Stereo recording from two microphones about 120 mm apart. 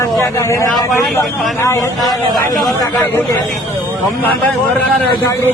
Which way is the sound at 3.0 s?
20° left (ahead or behind).